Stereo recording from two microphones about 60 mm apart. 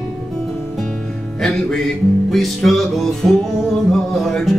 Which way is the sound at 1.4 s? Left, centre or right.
Centre.